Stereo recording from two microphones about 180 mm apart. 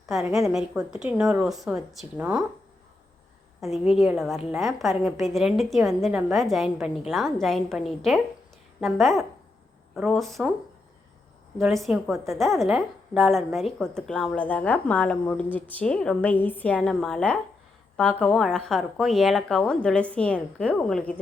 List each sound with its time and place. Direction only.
0.2 s a woman's voice: 15° right (ahead or behind)
0.4 s a woman's voice: centre (ahead or behind)
3.6 s a woman's voice: centre (ahead or behind)
11.5 s a woman's voice: centre (ahead or behind)